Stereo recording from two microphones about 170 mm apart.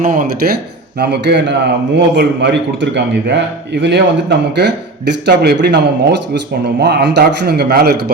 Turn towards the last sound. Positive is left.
turn(degrees=-70)  # may be behind; listen again after turning